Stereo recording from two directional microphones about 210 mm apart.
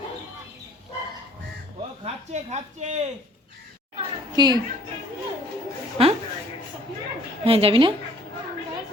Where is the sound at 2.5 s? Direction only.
35° right (ahead or behind).